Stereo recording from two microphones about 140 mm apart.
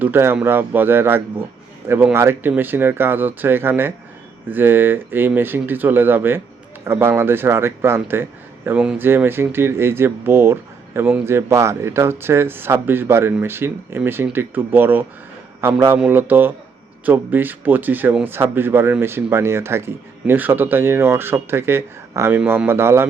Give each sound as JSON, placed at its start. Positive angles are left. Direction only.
{"t": 0.0, "sound": "speech", "side_deg": -15}
{"t": 8.8, "sound": "speech", "side_deg": -5}
{"t": 9.0, "sound": "speech", "side_deg": -15}